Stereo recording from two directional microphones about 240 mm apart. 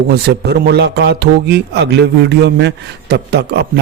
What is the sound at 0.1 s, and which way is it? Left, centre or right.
Speech, right.